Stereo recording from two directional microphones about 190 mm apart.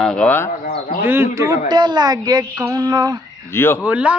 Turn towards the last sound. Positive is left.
turn(degrees=-5)  # may be behind; listen again after turning